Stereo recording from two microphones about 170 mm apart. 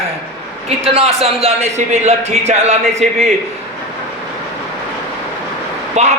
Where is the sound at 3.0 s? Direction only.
Centre (ahead or behind).